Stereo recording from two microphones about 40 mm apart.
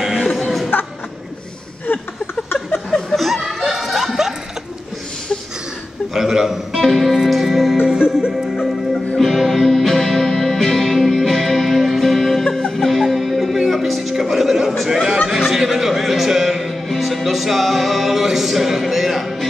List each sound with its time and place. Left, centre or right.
0.0 s music: centre
0.3 s music: centre
1.9 s a sound: left
3.2 s laughter: centre
3.6 s a sound: centre
6.1 s music: centre
6.7 s music: centre
9.2 s music: centre
14.8 s a sound: centre
15.0 s music: centre